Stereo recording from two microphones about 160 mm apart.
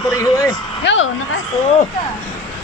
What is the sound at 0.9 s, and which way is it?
Speech, 90° left.